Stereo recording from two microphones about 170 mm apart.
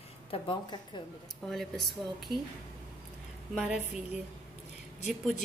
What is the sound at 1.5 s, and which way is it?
Speech, centre (ahead or behind).